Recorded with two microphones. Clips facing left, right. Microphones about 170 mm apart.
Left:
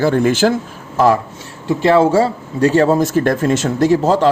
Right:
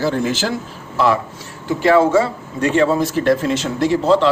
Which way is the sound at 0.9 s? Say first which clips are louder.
Left 4 dB; 40° left (ahead or behind).